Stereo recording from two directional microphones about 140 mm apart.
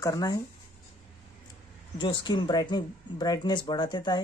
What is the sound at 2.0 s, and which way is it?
Speech, 35° left (ahead or behind).